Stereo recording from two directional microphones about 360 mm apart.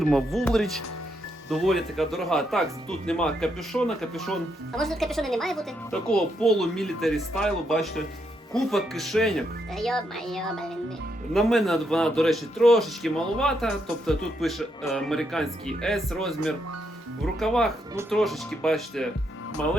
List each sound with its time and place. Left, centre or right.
0.0 s a man's voice: centre
17.4 s a man's voice: centre